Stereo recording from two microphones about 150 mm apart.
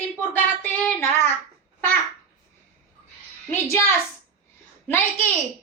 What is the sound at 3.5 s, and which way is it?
Speech, 15° left (ahead or behind).